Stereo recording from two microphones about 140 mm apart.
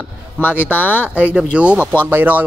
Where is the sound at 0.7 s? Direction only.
15° left (ahead or behind).